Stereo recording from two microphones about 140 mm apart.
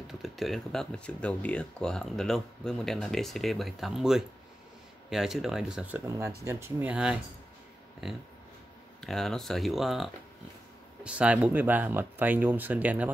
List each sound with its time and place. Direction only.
0.2 s speech: centre (ahead or behind)
6.0 s speech: 20° right (ahead or behind)